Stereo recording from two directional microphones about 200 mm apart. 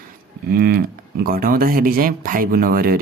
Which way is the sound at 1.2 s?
50° right (ahead or behind).